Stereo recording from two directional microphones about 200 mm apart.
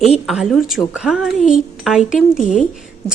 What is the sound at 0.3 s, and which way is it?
A woman's voice, centre (ahead or behind).